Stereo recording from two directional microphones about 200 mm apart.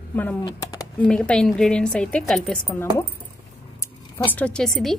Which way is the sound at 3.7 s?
10° left (ahead or behind).